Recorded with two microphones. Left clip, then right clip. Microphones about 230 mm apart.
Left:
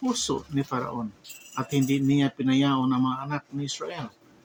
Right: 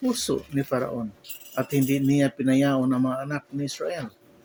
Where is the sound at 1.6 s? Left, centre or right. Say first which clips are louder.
Even; centre.